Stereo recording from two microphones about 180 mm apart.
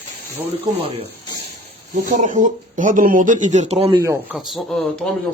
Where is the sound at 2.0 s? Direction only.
45° right (ahead or behind).